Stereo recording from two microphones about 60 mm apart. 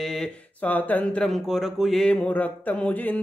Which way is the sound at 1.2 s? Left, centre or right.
Centre.